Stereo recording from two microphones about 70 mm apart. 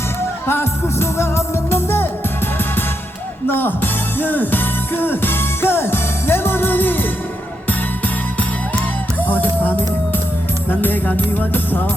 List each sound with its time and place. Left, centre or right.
0.4 s music: left
3.5 s music: left